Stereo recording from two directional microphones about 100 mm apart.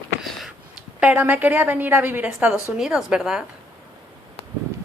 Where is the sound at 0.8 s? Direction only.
10° right (ahead or behind).